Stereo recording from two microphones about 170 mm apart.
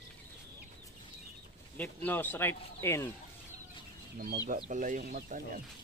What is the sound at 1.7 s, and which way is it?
Speech, 10° left (ahead or behind).